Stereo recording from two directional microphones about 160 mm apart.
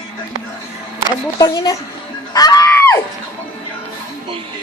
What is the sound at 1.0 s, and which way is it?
Speech, 25° left (ahead or behind).